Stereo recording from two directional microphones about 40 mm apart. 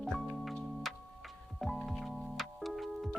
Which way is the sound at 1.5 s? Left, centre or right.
Centre.